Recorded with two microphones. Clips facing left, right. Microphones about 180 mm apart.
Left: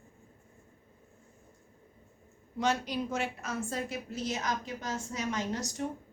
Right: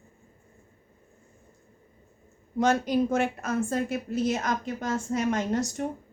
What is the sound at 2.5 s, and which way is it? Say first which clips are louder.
A woman's voice: right 7 dB; 50° right (ahead or behind).